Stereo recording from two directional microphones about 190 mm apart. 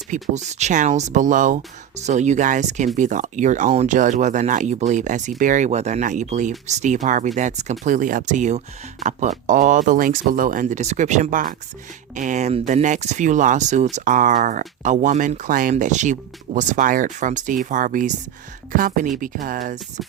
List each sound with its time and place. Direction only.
0.1 s speech: 40° right (ahead or behind)